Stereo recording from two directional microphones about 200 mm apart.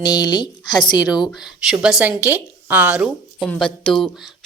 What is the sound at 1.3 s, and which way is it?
A woman's voice, centre (ahead or behind).